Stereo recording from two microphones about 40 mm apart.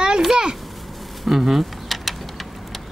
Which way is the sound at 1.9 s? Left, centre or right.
Centre.